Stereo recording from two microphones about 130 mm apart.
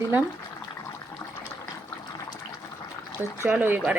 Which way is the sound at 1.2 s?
10° left (ahead or behind).